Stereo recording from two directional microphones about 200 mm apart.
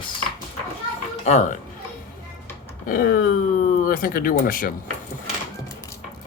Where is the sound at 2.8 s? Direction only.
45° left (ahead or behind).